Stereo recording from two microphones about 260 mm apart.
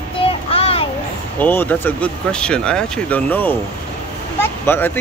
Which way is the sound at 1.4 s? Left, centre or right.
Centre.